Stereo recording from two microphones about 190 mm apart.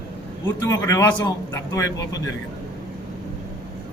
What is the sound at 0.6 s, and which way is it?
Speech, 15° left (ahead or behind).